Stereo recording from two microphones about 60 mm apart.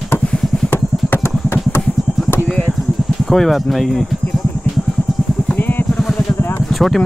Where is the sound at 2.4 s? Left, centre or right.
Centre.